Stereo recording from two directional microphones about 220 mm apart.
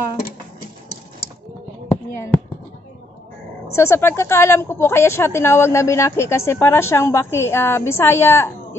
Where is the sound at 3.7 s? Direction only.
10° left (ahead or behind).